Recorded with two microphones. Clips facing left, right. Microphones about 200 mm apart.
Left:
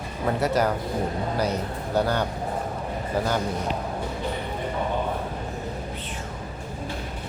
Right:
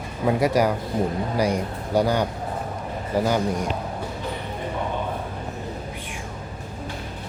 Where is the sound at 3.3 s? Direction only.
10° right (ahead or behind).